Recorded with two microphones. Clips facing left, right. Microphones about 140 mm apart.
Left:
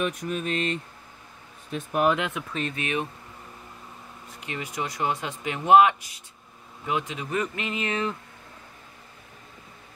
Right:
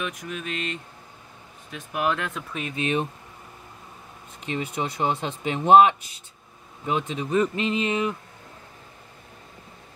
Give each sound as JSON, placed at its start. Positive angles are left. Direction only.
{"t": 0.0, "sound": "speech", "side_deg": 40}
{"t": 2.0, "sound": "speech", "side_deg": 10}
{"t": 2.7, "sound": "speech", "side_deg": -30}
{"t": 4.5, "sound": "speech", "side_deg": -25}